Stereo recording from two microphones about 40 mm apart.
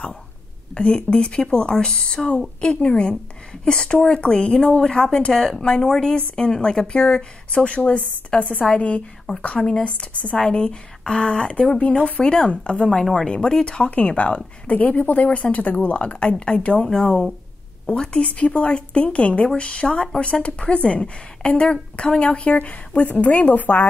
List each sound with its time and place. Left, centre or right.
0.7 s a woman's voice: left
10.4 s a woman's voice: left
14.0 s speech: left
18.1 s a woman's voice: left
20.6 s a woman's voice: left
22.2 s speech: left